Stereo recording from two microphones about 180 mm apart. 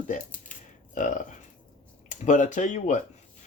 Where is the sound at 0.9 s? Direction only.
45° left (ahead or behind).